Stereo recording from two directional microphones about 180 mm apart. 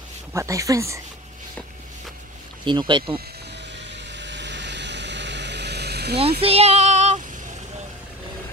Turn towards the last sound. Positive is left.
turn(degrees=-40)  # may be behind; listen again after turning